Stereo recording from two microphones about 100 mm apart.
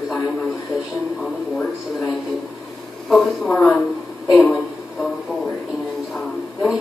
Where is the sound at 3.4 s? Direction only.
15° left (ahead or behind).